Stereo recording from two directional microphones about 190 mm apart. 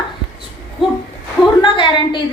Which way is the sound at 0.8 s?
Centre (ahead or behind).